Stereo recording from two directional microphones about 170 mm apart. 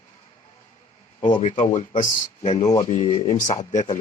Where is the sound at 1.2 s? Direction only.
50° left (ahead or behind).